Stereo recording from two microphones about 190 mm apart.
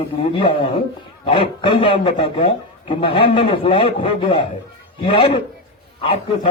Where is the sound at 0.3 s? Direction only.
25° left (ahead or behind).